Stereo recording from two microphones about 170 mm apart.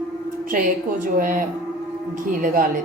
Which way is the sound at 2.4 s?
55° right (ahead or behind).